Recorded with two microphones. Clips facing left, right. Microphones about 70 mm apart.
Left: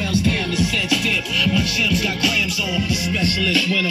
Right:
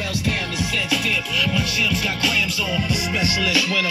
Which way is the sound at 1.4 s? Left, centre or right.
Centre.